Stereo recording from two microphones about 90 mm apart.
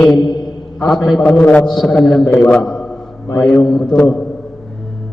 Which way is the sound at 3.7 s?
5° left (ahead or behind).